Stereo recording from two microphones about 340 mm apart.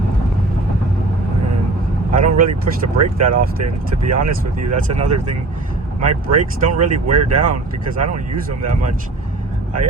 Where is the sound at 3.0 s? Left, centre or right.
Right.